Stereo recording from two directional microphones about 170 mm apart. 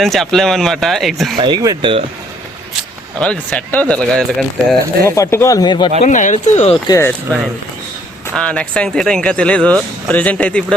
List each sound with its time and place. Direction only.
0.0 s speech: centre (ahead or behind)
1.4 s speech: 25° right (ahead or behind)
3.2 s speech: 5° left (ahead or behind)
5.0 s speech: 15° left (ahead or behind)
6.0 s speech: 45° left (ahead or behind)
6.8 s speech: 20° left (ahead or behind)
7.3 s speech: 10° left (ahead or behind)